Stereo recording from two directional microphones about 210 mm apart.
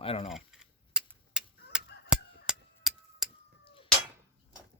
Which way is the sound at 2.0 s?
5° right (ahead or behind).